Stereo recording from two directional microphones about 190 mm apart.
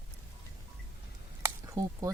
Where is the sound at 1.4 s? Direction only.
20° right (ahead or behind).